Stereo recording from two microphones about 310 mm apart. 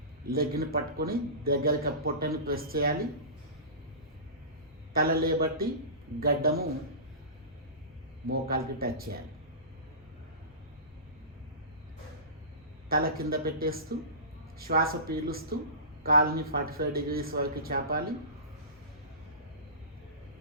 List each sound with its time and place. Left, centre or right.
0.3 s a man's voice: right
5.2 s a man's voice: right
8.3 s a man's voice: right
12.9 s a man's voice: right